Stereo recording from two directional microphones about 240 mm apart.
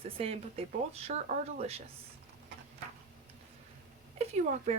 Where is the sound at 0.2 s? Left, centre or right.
Right.